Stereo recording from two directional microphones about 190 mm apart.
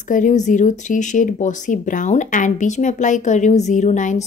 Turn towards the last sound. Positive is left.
turn(degrees=40)  # may be behind; listen again after turning